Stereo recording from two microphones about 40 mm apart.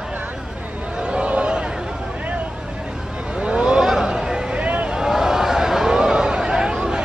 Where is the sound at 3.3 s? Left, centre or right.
Right.